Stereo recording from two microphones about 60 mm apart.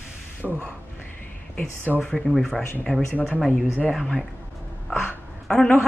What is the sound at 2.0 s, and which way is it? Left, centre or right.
Speech, centre.